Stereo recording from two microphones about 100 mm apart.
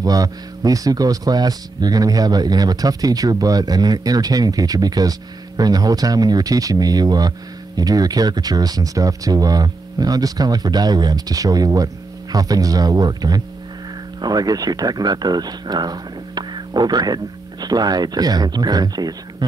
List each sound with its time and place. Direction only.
0.0 s speech: 40° right (ahead or behind)